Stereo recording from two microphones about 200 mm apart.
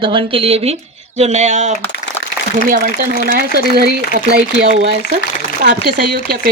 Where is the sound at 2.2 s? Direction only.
70° left (ahead or behind).